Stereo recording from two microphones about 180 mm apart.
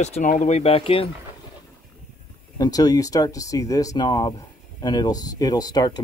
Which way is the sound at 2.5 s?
20° left (ahead or behind).